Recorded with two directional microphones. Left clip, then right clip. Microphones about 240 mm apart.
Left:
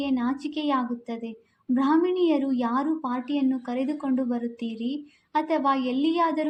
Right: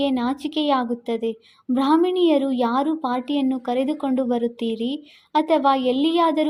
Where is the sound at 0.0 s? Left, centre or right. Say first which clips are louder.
Right 5 dB; right.